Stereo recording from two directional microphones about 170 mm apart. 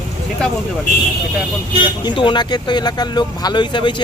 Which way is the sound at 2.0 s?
30° left (ahead or behind).